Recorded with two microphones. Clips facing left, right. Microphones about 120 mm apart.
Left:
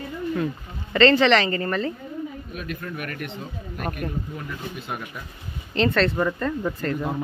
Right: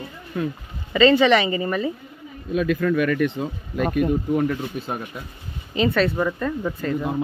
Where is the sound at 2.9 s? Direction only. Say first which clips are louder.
Right 12 dB; 90° right.